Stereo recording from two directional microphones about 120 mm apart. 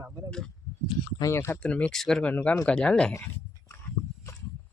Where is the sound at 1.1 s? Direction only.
25° left (ahead or behind).